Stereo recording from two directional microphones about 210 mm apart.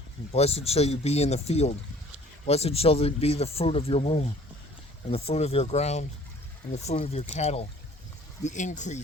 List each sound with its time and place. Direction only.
0.3 s speech: 30° left (ahead or behind)